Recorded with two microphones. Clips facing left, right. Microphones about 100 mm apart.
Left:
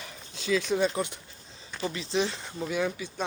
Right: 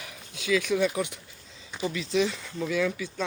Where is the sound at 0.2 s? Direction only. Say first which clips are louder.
Right 1 dB; 35° left (ahead or behind).